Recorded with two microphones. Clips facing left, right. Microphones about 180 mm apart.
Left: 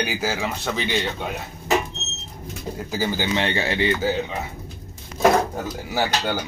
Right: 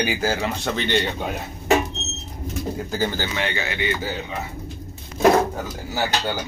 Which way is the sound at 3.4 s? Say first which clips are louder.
Left 4 dB; 30° left (ahead or behind).